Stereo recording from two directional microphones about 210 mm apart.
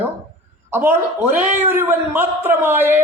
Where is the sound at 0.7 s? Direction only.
10° right (ahead or behind).